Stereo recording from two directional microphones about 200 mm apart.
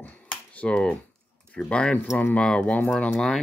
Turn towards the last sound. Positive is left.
turn(degrees=5)  # may be behind; listen again after turning